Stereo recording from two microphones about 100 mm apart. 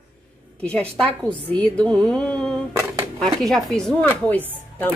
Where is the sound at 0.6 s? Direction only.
10° left (ahead or behind).